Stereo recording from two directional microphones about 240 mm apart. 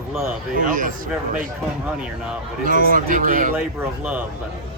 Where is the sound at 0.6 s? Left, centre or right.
Right.